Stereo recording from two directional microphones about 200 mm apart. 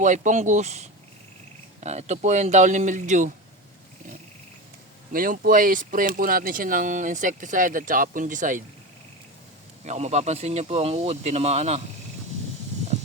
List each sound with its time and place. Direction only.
0.0 s speech: 40° right (ahead or behind)
5.1 s speech: 45° right (ahead or behind)
9.8 s speech: 35° right (ahead or behind)